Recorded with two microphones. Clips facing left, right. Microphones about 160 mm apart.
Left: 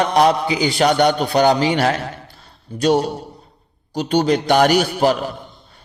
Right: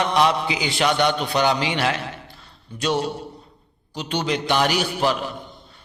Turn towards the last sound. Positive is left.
turn(degrees=45)  # may be behind; listen again after turning